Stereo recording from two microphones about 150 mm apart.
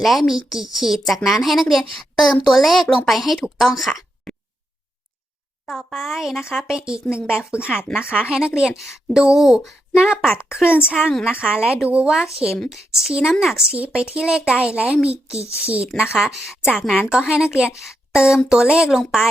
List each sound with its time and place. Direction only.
0.0 s a woman's voice: centre (ahead or behind)
5.6 s a woman's voice: centre (ahead or behind)
7.0 s speech: 15° left (ahead or behind)
7.3 s a woman's voice: 5° right (ahead or behind)
16.1 s a woman's voice: centre (ahead or behind)